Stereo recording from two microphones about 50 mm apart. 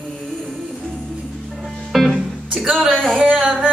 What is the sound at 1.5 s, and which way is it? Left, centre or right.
Music, centre.